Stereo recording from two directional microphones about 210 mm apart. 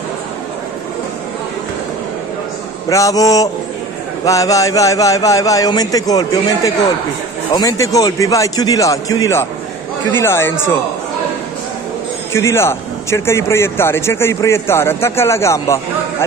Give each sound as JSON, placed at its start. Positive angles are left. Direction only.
{"t": 2.9, "sound": "a man's voice", "side_deg": 15}
{"t": 12.3, "sound": "a man's voice", "side_deg": 10}